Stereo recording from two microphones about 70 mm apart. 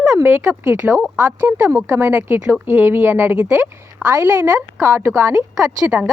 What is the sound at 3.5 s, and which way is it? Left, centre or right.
Speech, right.